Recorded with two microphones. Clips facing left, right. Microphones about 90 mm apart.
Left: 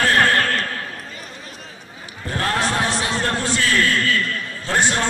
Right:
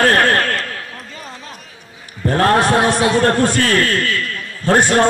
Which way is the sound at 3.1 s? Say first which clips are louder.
Right 8 dB; 55° right (ahead or behind).